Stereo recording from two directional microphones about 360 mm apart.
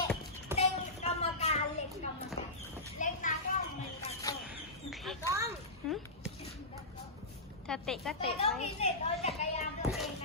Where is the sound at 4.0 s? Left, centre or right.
Centre.